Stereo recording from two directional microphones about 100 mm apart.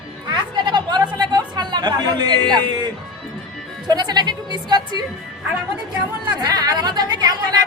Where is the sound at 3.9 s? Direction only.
45° right (ahead or behind).